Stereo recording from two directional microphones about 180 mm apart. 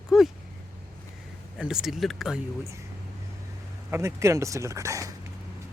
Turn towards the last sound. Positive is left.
turn(degrees=-15)  # may be behind; listen again after turning